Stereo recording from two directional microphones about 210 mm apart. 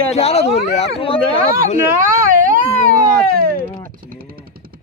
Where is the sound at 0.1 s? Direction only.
30° left (ahead or behind).